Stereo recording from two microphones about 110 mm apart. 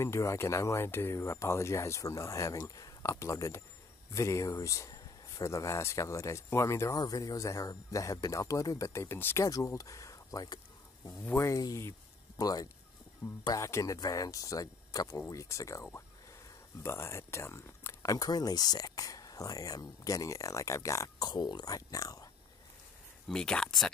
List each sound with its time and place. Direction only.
0.0 s speech: 25° left (ahead or behind)
21.3 s speech: 40° left (ahead or behind)
23.2 s speech: 5° left (ahead or behind)